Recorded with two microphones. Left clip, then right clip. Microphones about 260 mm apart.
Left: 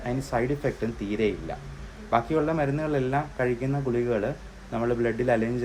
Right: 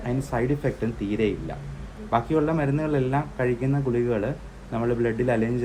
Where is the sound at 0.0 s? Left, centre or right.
Centre.